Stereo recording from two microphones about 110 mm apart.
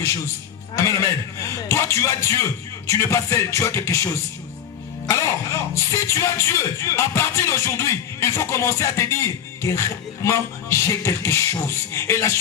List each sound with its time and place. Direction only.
0.8 s music: 25° left (ahead or behind)